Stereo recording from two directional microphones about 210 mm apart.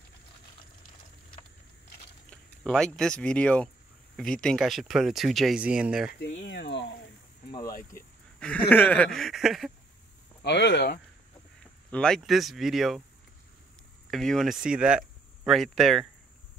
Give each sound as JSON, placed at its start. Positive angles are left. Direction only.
{"t": 2.6, "sound": "speech", "side_deg": 5}
{"t": 6.4, "sound": "a sound", "side_deg": 55}
{"t": 8.4, "sound": "speech", "side_deg": 5}
{"t": 10.4, "sound": "speech", "side_deg": 55}
{"t": 11.9, "sound": "speech", "side_deg": 5}
{"t": 14.1, "sound": "speech", "side_deg": 0}